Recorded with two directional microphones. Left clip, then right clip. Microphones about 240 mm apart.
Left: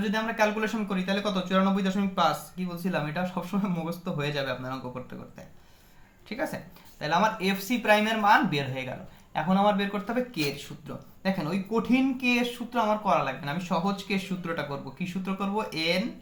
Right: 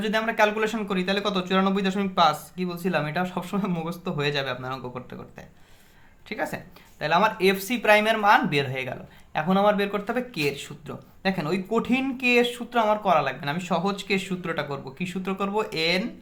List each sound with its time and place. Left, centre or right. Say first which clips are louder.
0.0 s speech: right 4 dB; right